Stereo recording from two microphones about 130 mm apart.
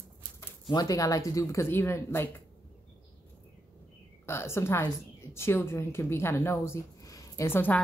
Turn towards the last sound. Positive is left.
turn(degrees=15)  # may be behind; listen again after turning